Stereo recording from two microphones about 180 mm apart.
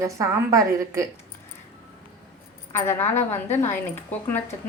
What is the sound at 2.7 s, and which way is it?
A woman's voice, 10° left (ahead or behind).